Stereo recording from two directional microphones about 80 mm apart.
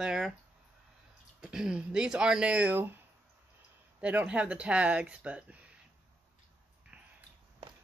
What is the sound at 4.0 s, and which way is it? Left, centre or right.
Speech, centre.